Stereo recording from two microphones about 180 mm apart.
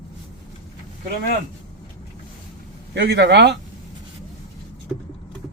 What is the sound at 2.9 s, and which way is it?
Speech, 75° right (ahead or behind).